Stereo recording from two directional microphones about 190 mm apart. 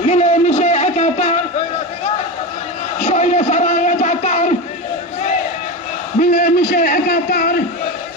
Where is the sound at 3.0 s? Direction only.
40° left (ahead or behind).